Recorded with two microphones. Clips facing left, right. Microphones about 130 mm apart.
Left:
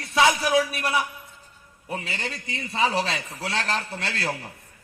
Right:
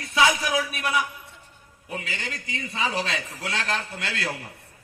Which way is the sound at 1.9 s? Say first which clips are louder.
Left 2 dB; 35° left (ahead or behind).